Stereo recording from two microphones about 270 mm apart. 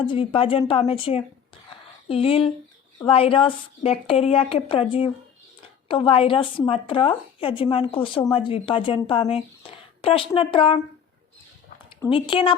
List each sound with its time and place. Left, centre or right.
0.0 s speech: centre
12.1 s speech: centre